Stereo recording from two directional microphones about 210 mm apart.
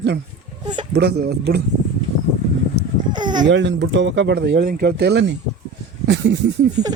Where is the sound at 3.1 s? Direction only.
20° right (ahead or behind).